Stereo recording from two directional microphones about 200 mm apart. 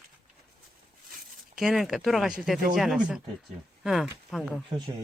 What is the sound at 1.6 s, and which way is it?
Speech, centre (ahead or behind).